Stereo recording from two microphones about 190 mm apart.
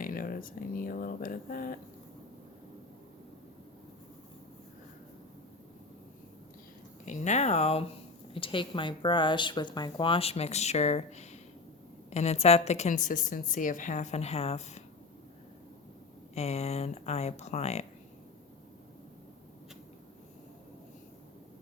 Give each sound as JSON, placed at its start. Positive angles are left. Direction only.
{"t": 0.0, "sound": "speech", "side_deg": 50}
{"t": 7.0, "sound": "a woman's voice", "side_deg": 40}
{"t": 16.3, "sound": "a woman's voice", "side_deg": 35}